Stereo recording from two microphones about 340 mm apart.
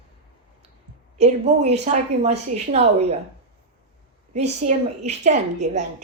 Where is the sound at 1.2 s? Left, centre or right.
Centre.